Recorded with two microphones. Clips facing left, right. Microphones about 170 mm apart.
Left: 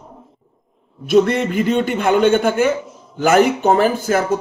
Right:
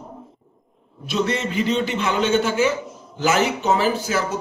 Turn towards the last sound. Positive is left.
turn(degrees=50)  # may be behind; listen again after turning